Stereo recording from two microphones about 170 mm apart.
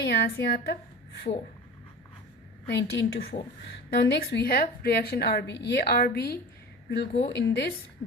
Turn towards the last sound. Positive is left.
turn(degrees=85)